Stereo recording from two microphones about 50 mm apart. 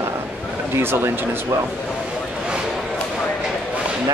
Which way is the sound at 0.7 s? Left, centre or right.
Right.